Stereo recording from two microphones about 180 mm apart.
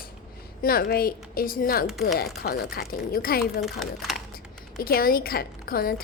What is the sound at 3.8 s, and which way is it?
Speech, centre (ahead or behind).